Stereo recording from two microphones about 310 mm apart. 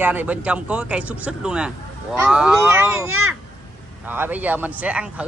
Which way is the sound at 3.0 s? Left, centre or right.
Right.